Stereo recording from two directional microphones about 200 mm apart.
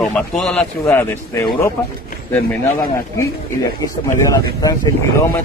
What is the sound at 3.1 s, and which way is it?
Speech, 15° left (ahead or behind).